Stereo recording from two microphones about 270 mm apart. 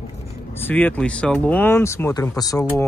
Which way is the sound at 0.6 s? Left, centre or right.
Centre.